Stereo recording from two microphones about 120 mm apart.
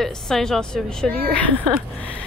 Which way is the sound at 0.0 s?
5° left (ahead or behind).